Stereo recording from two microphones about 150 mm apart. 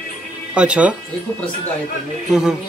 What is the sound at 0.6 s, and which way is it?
Speech, 10° right (ahead or behind).